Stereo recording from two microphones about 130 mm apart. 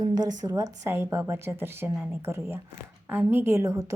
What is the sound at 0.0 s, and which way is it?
A woman's voice, 30° right (ahead or behind).